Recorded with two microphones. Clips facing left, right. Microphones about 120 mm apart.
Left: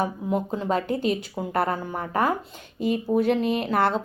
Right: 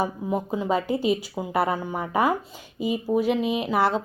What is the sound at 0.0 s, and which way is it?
Speech, 5° right (ahead or behind).